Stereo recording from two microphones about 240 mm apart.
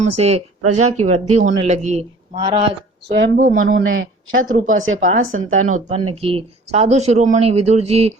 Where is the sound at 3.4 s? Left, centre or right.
Right.